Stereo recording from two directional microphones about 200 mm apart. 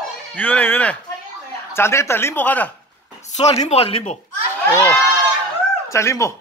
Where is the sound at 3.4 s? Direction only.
35° left (ahead or behind).